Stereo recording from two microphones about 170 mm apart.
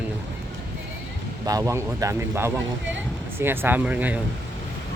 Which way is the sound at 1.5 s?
20° right (ahead or behind).